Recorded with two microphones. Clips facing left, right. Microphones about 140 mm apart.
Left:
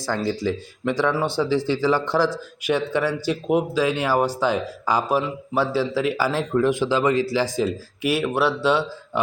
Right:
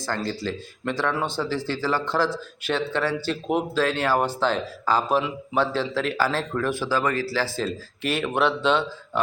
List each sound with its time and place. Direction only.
0.0 s a man's voice: 15° left (ahead or behind)